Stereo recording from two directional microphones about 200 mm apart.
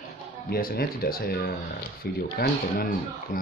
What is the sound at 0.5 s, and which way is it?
Speech, 45° left (ahead or behind).